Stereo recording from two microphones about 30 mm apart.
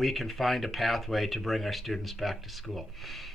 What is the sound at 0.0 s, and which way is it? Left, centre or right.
Speech, centre.